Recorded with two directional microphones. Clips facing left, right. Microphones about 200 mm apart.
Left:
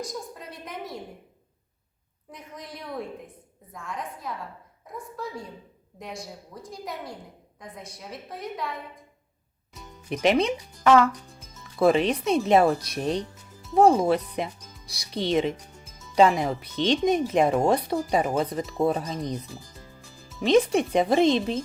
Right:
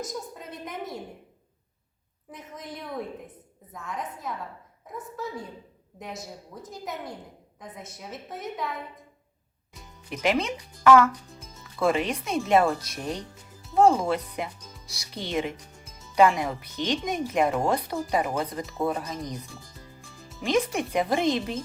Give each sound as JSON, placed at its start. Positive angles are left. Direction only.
{"t": 0.1, "sound": "a woman's voice", "side_deg": 0}
{"t": 2.3, "sound": "a woman's voice", "side_deg": 0}
{"t": 6.5, "sound": "a woman's voice", "side_deg": 0}
{"t": 7.9, "sound": "a woman's voice", "side_deg": 0}
{"t": 10.1, "sound": "speech", "side_deg": 20}
{"t": 13.7, "sound": "speech", "side_deg": 20}
{"t": 20.4, "sound": "speech", "side_deg": 25}